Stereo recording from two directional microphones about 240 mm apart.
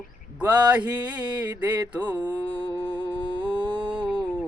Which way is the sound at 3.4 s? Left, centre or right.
Centre.